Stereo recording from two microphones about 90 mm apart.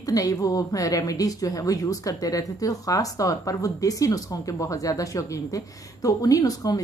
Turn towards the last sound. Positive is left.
turn(degrees=40)  # may be behind; listen again after turning